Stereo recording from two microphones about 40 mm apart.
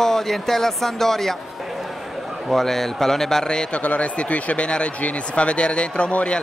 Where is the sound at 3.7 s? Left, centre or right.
Left.